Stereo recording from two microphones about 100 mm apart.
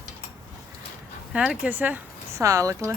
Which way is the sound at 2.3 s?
30° right (ahead or behind).